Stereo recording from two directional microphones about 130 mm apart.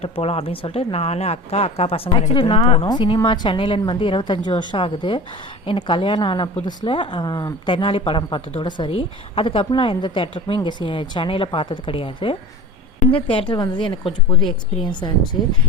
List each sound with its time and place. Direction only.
0.0 s a woman's voice: 50° left (ahead or behind); by 15.4 s 35° left (ahead or behind)